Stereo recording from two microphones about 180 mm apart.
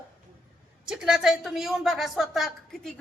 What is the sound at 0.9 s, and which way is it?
A woman's voice, 5° right (ahead or behind).